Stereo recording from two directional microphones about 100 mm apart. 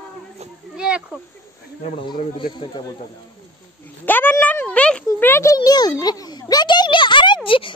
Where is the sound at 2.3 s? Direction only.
50° left (ahead or behind).